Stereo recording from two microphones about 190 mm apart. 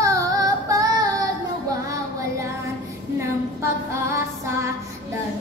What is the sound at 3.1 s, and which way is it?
Female singing, 15° right (ahead or behind).